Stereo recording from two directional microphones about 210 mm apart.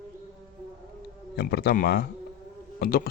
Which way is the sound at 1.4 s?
50° left (ahead or behind).